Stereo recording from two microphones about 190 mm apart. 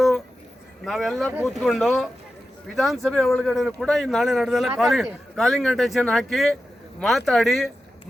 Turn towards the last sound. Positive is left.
turn(degrees=0)  # may be behind; listen again after turning